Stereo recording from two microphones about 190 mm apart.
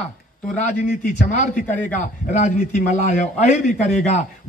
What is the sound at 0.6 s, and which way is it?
A man's voice, 40° left (ahead or behind).